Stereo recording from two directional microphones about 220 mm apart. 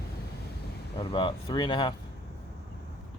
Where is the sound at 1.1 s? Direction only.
20° left (ahead or behind).